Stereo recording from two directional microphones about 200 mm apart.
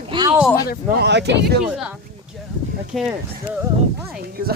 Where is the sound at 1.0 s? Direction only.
60° right (ahead or behind).